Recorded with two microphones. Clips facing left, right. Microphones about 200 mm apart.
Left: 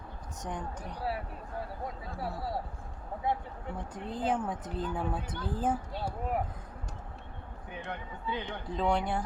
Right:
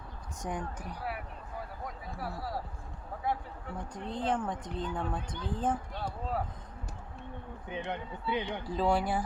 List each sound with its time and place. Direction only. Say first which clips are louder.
0.4 s speech: right 1 dB; 10° right (ahead or behind)
2.1 s speech: left 2 dB; 25° left (ahead or behind)
3.9 s a woman's voice: left 1 dB; 5° left (ahead or behind)
7.7 s speech: right 4 dB; 20° right (ahead or behind)
8.7 s a woman's voice: right 1 dB; 5° right (ahead or behind)